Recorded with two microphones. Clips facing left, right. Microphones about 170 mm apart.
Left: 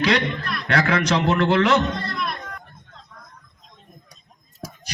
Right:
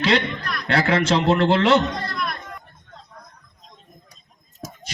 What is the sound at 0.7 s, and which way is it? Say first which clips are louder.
A man's voice: right 1 dB; 25° right (ahead or behind).